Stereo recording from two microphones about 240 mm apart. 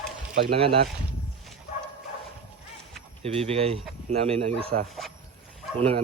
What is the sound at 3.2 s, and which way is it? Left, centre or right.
Speech, right.